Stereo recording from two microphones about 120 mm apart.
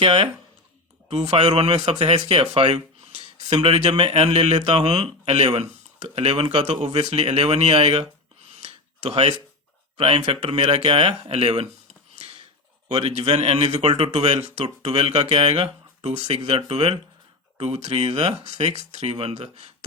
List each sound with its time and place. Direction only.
1.1 s speech: 60° right (ahead or behind)
3.1 s speech: 60° right (ahead or behind)
8.5 s a sound: 65° right (ahead or behind)
10.0 s speech: 60° right (ahead or behind)
12.9 s speech: 65° right (ahead or behind)